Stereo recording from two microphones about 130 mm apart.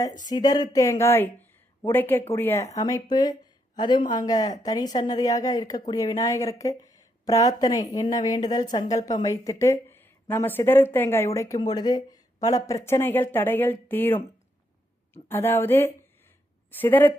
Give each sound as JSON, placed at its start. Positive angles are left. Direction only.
{"t": 0.3, "sound": "speech", "side_deg": 30}